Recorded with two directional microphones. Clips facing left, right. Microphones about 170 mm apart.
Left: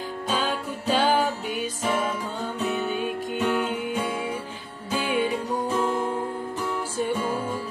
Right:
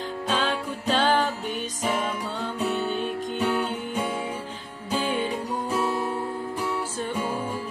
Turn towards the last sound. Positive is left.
turn(degrees=-10)  # may be behind; listen again after turning